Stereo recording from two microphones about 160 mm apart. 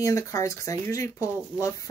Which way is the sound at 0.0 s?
20° left (ahead or behind).